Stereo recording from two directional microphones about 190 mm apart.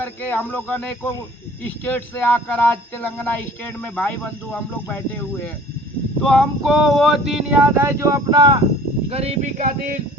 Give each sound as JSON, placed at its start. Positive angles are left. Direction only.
{"t": 0.0, "sound": "speech", "side_deg": 10}
{"t": 6.2, "sound": "a sound", "side_deg": 0}
{"t": 9.0, "sound": "speech", "side_deg": -35}